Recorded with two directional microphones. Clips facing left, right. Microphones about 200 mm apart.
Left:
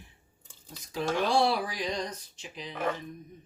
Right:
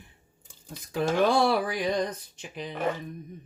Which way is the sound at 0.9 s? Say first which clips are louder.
Right 4 dB; 55° right (ahead or behind).